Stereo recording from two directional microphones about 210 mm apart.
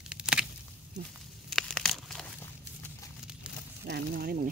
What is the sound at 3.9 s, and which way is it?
Speech, 50° right (ahead or behind).